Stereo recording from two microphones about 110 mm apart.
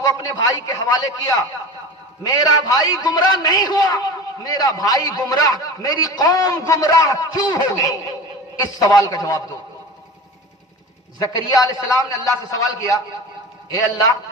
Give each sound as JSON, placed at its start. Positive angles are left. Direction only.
{"t": 0.0, "sound": "a man's voice", "side_deg": 35}
{"t": 11.4, "sound": "a man's voice", "side_deg": 30}